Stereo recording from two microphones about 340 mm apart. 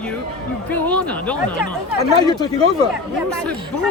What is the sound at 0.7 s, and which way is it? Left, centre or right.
A man's voice, centre.